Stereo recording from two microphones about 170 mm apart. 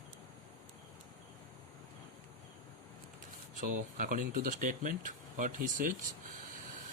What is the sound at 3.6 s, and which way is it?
Speech, 55° right (ahead or behind).